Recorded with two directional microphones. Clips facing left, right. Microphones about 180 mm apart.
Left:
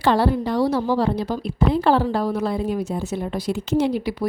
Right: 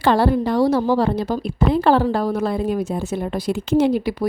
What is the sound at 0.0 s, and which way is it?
A woman's voice, 55° right (ahead or behind).